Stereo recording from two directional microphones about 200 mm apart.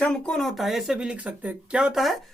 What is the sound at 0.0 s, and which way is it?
Speech, 5° left (ahead or behind).